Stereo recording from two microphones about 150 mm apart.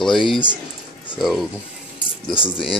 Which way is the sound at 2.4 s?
35° left (ahead or behind).